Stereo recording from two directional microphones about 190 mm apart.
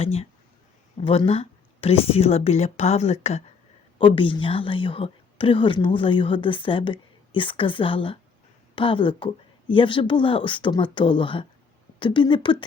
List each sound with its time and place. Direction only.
0.0 s a woman's voice: 35° left (ahead or behind)